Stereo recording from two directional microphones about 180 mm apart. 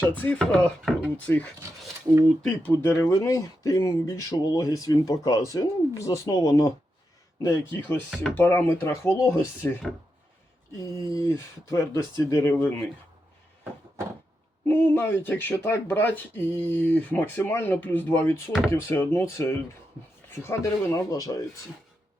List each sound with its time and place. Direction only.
0.0 s speech: 10° left (ahead or behind)
10.9 s speech: 15° left (ahead or behind)
14.7 s speech: 10° left (ahead or behind)